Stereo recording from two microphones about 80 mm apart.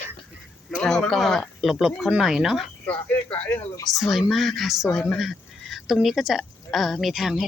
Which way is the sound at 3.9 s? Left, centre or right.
Centre.